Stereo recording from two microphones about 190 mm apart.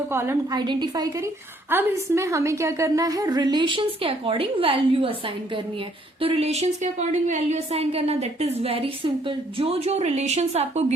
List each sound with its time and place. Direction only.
0.1 s a woman's voice: 15° right (ahead or behind); by 10.9 s 35° right (ahead or behind)